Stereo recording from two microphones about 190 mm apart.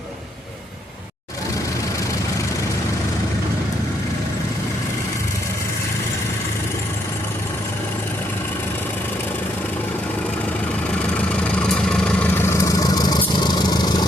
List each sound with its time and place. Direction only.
11.3 s vehicle: 5° left (ahead or behind); by 14.1 s 20° left (ahead or behind)